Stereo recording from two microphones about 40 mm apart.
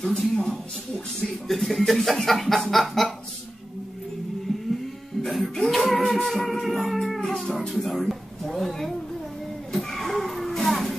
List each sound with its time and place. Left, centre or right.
0.0 s speech: centre
1.5 s chuckle: centre
5.2 s music: centre
8.5 s a sound: centre